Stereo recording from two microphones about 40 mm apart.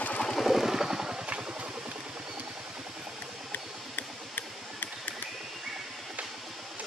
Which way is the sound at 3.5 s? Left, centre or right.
Left.